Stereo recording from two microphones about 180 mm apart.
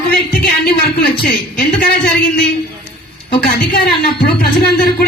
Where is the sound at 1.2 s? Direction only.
60° left (ahead or behind).